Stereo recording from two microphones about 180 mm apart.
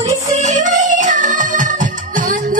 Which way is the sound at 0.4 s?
40° right (ahead or behind).